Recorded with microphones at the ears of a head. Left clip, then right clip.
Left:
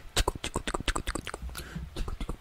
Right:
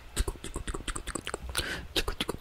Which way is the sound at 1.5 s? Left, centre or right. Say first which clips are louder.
Right 11 dB; right.